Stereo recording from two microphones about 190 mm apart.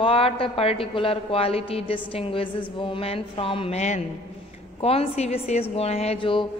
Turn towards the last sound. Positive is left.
turn(degrees=25)  # may be behind; listen again after turning